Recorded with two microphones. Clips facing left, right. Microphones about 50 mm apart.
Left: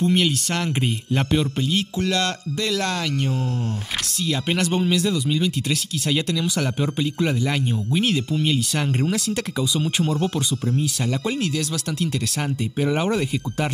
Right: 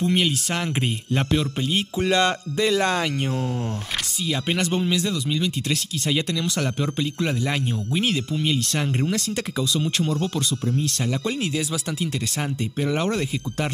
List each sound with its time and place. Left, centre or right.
0.0 s speech: centre
1.7 s speech: right
4.3 s speech: centre
11.3 s speech: centre
12.8 s speech: centre